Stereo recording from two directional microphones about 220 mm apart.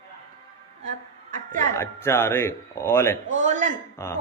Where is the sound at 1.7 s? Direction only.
10° left (ahead or behind).